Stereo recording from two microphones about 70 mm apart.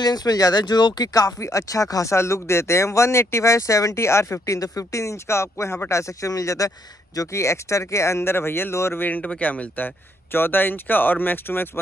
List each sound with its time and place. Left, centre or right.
0.0 s speech: left
9.0 s speech: left